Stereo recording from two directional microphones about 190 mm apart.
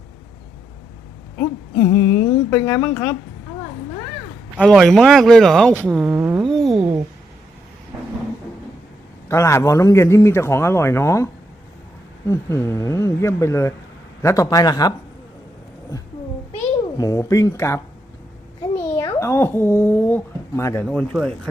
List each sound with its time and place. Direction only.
1.4 s a man's voice: 15° left (ahead or behind)
4.6 s speech: centre (ahead or behind)
6.1 s a sound: 15° right (ahead or behind)
6.4 s a sound: centre (ahead or behind)
9.3 s a man's voice: 15° left (ahead or behind)
17.0 s a man's voice: 15° left (ahead or behind)
18.8 s a child's voice: 15° left (ahead or behind)
20.8 s speech: 5° left (ahead or behind)